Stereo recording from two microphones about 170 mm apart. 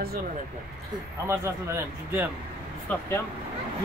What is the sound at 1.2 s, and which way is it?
A man's voice, 15° right (ahead or behind).